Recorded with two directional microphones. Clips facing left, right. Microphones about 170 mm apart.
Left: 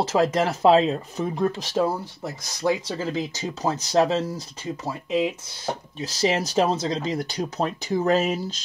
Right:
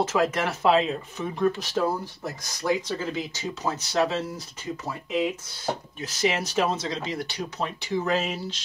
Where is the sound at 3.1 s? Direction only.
35° left (ahead or behind).